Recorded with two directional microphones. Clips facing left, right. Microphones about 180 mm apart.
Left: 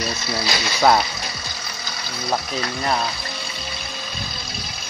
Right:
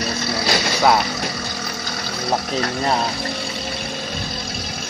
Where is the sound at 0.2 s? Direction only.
65° right (ahead or behind).